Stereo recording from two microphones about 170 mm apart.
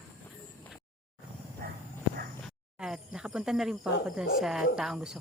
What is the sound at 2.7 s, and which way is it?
Cricket, 5° right (ahead or behind).